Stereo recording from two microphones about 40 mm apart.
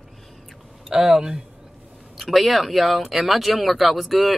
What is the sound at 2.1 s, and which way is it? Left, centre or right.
Speech, centre.